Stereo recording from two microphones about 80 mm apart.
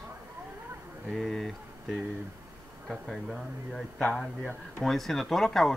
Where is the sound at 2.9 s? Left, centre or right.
Centre.